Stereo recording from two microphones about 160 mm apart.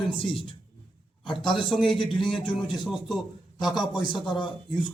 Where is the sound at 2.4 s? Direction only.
30° left (ahead or behind).